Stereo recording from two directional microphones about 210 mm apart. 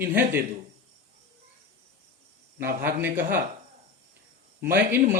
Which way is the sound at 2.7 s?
45° right (ahead or behind).